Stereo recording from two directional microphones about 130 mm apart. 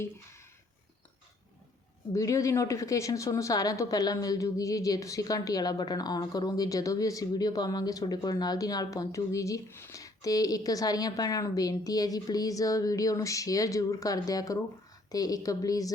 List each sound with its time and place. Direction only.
2.1 s speech: 25° left (ahead or behind)